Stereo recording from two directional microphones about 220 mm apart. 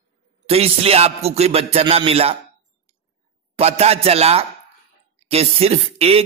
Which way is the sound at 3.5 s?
30° right (ahead or behind).